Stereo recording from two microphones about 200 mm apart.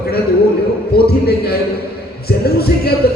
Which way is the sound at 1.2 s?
55° left (ahead or behind).